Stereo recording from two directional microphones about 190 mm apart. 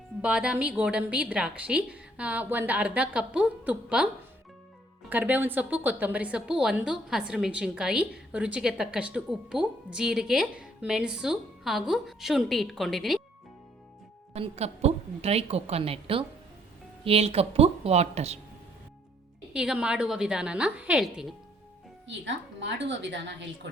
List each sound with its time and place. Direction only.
0.2 s a woman's voice: 5° right (ahead or behind)
14.3 s a woman's voice: 35° right (ahead or behind)
19.5 s a woman's voice: 5° right (ahead or behind)
22.0 s speech: 75° right (ahead or behind)